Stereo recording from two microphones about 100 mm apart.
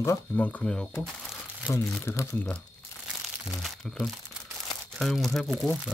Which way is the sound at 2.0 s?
25° left (ahead or behind).